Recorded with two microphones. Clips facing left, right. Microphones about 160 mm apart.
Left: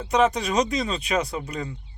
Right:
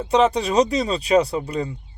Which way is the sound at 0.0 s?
30° right (ahead or behind).